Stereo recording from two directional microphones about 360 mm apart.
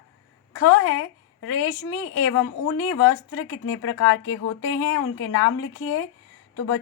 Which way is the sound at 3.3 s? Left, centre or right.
Left.